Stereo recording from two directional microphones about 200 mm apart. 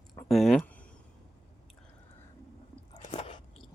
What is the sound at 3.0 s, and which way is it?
Chewing, 30° left (ahead or behind).